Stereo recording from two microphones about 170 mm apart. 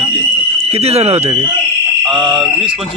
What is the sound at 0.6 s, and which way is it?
Speech, 35° right (ahead or behind).